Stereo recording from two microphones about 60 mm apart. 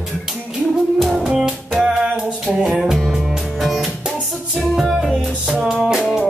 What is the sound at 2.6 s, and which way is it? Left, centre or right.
Music, centre.